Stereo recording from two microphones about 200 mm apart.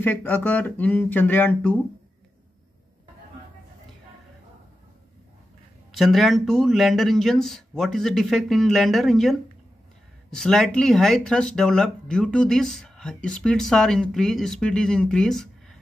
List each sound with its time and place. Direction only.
0.0 s speech: 10° left (ahead or behind)
5.9 s speech: centre (ahead or behind)